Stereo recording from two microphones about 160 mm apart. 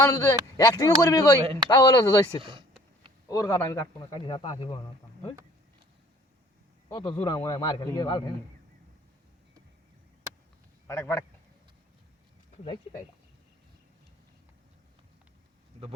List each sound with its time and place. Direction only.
0.0 s speech: 15° left (ahead or behind)
2.4 s speech: 30° right (ahead or behind)
3.2 s speech: 20° left (ahead or behind)
6.8 s speech: 25° left (ahead or behind)
10.8 s speech: 15° left (ahead or behind)
12.6 s speech: 25° left (ahead or behind)